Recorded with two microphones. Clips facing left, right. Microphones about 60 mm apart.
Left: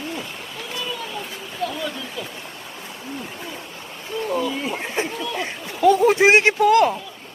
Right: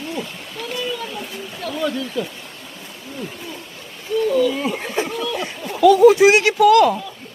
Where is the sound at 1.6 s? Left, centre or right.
Centre.